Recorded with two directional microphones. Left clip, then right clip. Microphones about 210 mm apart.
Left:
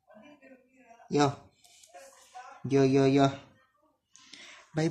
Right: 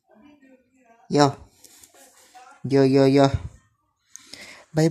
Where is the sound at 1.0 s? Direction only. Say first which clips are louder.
Right 8 dB; 30° right (ahead or behind).